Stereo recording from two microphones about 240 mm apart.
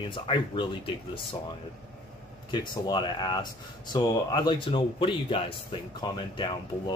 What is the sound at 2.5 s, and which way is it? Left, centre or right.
Speech, centre.